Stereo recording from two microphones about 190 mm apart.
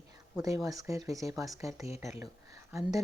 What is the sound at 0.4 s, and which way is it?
Speech, 15° right (ahead or behind).